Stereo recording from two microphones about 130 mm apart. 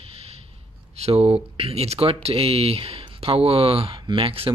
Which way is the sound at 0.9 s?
50° right (ahead or behind).